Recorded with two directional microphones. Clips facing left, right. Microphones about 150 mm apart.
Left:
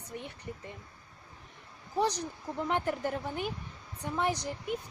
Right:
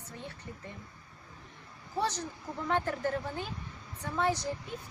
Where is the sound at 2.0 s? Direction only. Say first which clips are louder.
Left 3 dB; 15° left (ahead or behind).